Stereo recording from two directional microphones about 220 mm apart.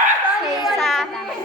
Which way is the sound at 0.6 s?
Centre (ahead or behind).